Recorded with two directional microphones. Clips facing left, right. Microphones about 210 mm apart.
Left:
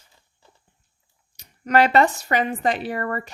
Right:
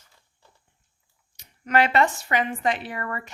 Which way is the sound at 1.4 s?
40° left (ahead or behind).